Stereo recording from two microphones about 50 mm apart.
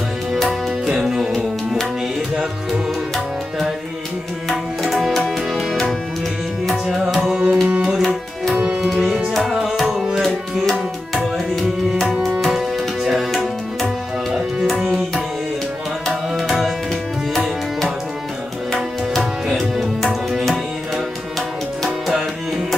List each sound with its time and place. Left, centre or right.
0.3 s music: centre
4.9 s music: centre
6.9 s tabla: centre
7.2 s tabla: right
8.0 s tabla: centre
9.0 s music: right
9.3 s music: centre
10.2 s tabla: centre
12.4 s music: centre
16.1 s tabla: centre
17.3 s music: centre
18.7 s tabla: centre